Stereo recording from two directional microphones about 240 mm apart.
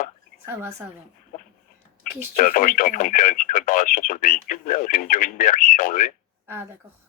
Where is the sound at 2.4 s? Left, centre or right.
Left.